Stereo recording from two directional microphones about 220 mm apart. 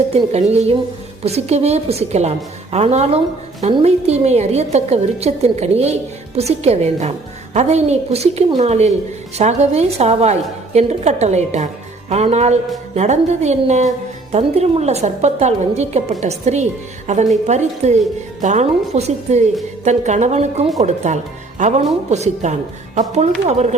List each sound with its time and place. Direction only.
0.1 s a woman's voice: 30° right (ahead or behind)